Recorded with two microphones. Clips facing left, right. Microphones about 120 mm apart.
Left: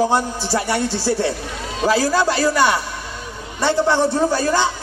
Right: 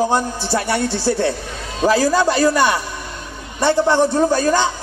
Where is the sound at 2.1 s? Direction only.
15° right (ahead or behind).